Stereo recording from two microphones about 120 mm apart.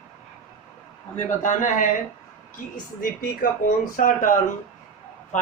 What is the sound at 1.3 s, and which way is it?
Speech, 90° left.